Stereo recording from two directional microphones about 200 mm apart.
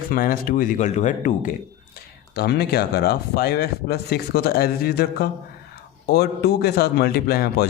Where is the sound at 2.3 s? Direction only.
55° left (ahead or behind).